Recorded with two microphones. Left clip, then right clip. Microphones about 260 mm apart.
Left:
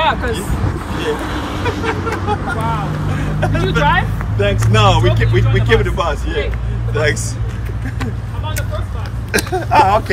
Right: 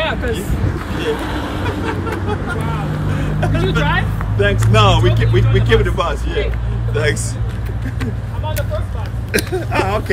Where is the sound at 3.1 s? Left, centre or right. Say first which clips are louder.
Left 1 dB; centre.